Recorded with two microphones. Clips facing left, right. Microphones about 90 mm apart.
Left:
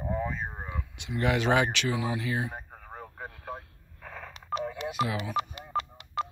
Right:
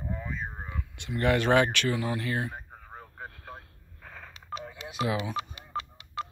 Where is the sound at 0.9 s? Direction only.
15° left (ahead or behind).